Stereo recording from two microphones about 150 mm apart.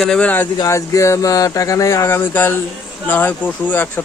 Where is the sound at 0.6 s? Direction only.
20° left (ahead or behind).